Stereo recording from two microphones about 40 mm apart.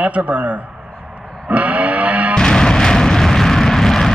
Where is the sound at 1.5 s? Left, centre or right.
Right.